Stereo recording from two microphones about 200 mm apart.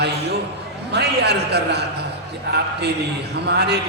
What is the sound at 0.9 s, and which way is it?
Speech, 55° right (ahead or behind).